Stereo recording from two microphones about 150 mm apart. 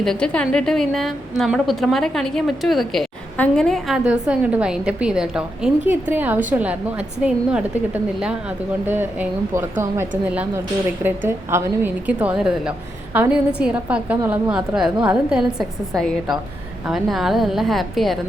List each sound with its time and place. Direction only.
0.0 s a woman's voice: 5° left (ahead or behind)